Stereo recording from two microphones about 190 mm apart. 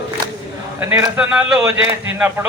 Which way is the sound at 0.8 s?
10° right (ahead or behind).